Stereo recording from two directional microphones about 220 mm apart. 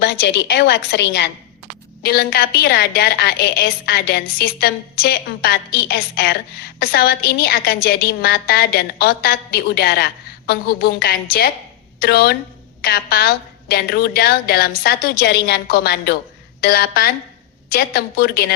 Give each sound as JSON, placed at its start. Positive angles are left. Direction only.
{"t": 0.0, "sound": "a woman's voice", "side_deg": 50}